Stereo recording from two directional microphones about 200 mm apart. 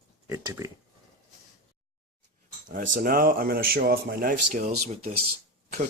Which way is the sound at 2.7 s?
40° right (ahead or behind).